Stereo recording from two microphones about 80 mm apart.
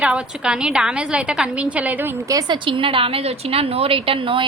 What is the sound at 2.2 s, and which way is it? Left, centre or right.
Speech, right.